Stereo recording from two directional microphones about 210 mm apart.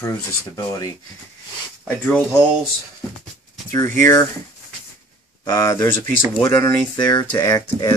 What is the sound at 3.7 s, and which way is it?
Speech, 10° left (ahead or behind).